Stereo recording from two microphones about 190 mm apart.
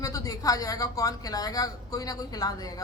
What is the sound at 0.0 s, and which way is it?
Speech, 20° left (ahead or behind).